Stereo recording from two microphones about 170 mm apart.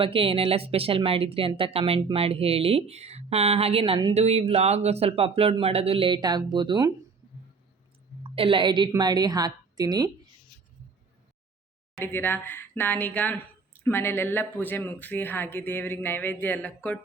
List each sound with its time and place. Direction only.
0.0 s speech: 30° right (ahead or behind)
8.4 s a woman's voice: 30° right (ahead or behind)
11.9 s speech: 10° left (ahead or behind)